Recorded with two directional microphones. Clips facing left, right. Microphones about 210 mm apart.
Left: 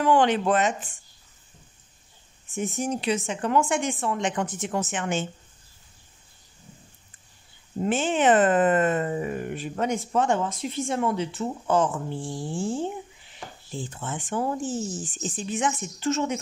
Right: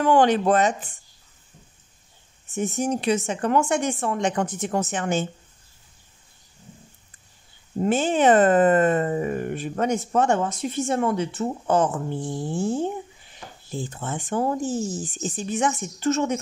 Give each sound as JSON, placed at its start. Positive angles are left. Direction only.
{"t": 0.0, "sound": "speech", "side_deg": -45}
{"t": 2.8, "sound": "speech", "side_deg": -45}
{"t": 7.8, "sound": "speech", "side_deg": -40}
{"t": 12.2, "sound": "dog", "side_deg": -65}
{"t": 13.7, "sound": "speech", "side_deg": -40}